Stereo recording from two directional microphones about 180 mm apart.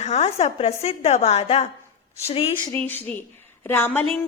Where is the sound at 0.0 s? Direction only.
35° left (ahead or behind).